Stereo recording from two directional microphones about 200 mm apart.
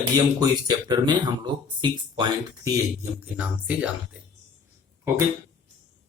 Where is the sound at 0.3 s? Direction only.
20° right (ahead or behind).